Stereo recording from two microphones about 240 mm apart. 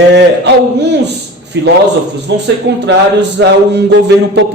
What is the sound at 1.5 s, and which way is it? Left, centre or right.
A man's voice, right.